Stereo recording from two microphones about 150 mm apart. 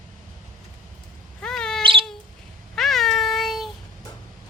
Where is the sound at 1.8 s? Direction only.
35° right (ahead or behind).